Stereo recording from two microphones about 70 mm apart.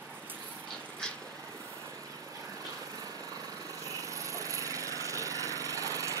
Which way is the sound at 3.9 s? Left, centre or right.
Right.